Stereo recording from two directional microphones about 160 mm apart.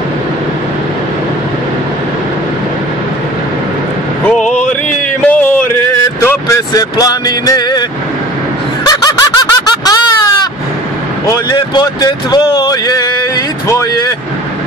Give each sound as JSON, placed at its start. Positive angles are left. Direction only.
{"t": 4.3, "sound": "a sound", "side_deg": 5}
{"t": 8.8, "sound": "snicker", "side_deg": 25}
{"t": 11.2, "sound": "speech", "side_deg": 25}